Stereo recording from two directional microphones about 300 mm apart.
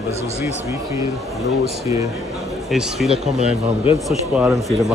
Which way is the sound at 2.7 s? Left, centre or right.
Centre.